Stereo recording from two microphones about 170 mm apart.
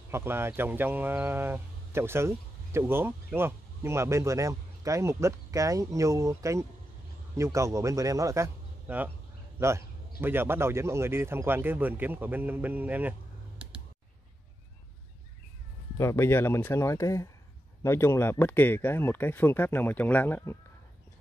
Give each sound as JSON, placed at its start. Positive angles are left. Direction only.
{"t": 0.1, "sound": "speech", "side_deg": -15}
{"t": 16.0, "sound": "speech", "side_deg": 15}